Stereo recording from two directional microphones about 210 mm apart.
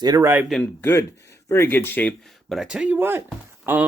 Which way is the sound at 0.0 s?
15° right (ahead or behind).